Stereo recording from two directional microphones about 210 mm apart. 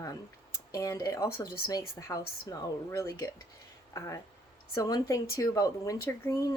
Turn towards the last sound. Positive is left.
turn(degrees=15)  # may be behind; listen again after turning